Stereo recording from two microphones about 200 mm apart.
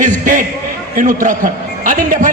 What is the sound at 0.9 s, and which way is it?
A man's voice, 40° right (ahead or behind).